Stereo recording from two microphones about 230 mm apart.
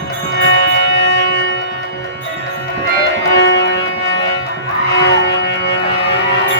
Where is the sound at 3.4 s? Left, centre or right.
Left.